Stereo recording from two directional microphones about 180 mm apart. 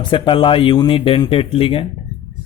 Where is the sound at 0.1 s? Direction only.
30° left (ahead or behind).